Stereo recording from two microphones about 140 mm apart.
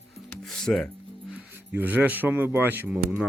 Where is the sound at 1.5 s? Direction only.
15° right (ahead or behind).